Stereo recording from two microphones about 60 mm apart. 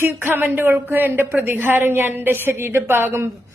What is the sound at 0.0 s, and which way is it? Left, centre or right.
A woman's voice, right.